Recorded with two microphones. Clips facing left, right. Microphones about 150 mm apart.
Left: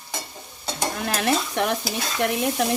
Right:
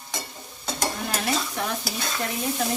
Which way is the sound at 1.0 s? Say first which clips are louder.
Left 7 dB; 70° left (ahead or behind).